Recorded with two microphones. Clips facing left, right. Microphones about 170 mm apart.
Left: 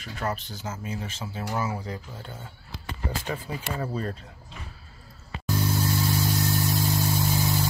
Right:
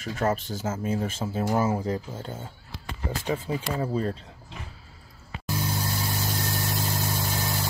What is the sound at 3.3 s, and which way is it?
Speech, 25° right (ahead or behind).